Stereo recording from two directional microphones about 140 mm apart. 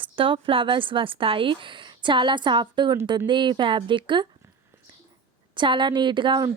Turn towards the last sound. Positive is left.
turn(degrees=-35)  # may be behind; listen again after turning